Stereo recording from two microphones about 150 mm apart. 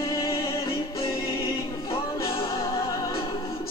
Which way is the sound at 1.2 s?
40° left (ahead or behind).